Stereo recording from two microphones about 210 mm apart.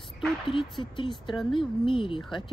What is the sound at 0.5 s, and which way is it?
Speech, 25° left (ahead or behind).